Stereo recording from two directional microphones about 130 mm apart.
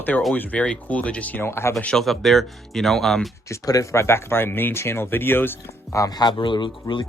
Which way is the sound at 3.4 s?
25° left (ahead or behind).